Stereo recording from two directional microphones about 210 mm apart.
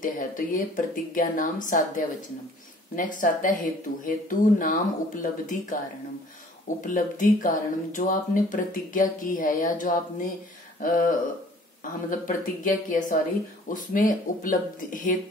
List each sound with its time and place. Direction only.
0.0 s speech: 40° left (ahead or behind)
3.0 s speech: 40° left (ahead or behind)
6.8 s speech: 40° left (ahead or behind)